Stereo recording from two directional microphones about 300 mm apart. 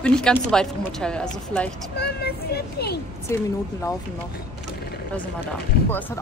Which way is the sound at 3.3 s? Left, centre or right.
Centre.